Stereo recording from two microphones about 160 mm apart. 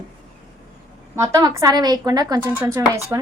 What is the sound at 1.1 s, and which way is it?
A woman's voice, 20° right (ahead or behind).